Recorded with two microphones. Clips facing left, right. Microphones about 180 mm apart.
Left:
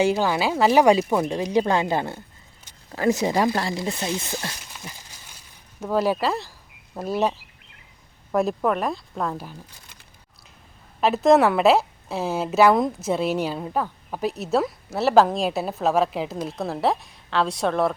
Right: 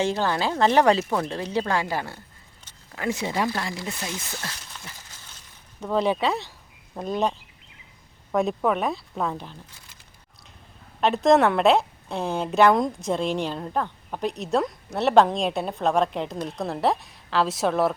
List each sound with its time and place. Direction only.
0.0 s speech: 10° left (ahead or behind)
2.9 s speech: 40° left (ahead or behind)
4.1 s speech: 20° left (ahead or behind)
4.6 s a sound: 15° left (ahead or behind)
5.8 s a woman's voice: 5° left (ahead or behind)
11.0 s a woman's voice: centre (ahead or behind)